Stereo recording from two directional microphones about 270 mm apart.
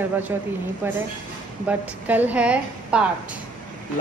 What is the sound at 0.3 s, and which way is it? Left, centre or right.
A woman's voice, centre.